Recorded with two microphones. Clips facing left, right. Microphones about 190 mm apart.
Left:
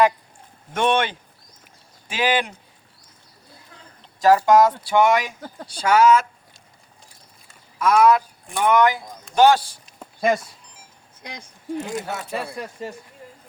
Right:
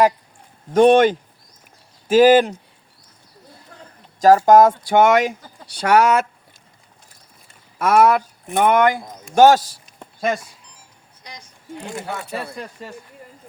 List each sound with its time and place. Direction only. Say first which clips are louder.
0.7 s speech: right 9 dB; 40° right (ahead or behind)
4.2 s speech: right 4 dB; 45° right (ahead or behind)
5.6 s speech: even; 65° right (ahead or behind)
7.8 s speech: right 1 dB; 60° right (ahead or behind); by 9.8 s 40° right (ahead or behind)
10.0 s a sound: left 2 dB; 5° left (ahead or behind)
11.2 s speech: left 3 dB; 55° left (ahead or behind)
11.8 s speech: left 2 dB; 20° left (ahead or behind)
12.1 s speech: even; 5° left (ahead or behind)